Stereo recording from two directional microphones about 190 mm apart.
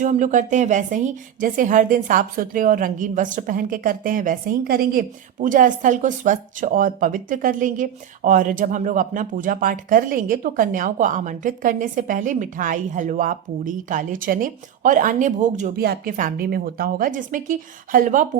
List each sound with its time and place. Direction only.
0.0 s a woman's voice: 40° right (ahead or behind)
15.7 s a woman's voice: 55° right (ahead or behind)